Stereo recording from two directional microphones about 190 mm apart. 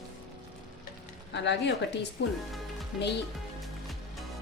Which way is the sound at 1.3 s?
65° left (ahead or behind).